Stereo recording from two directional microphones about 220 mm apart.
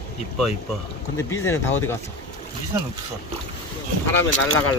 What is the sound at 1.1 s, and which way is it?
Speech, 10° left (ahead or behind).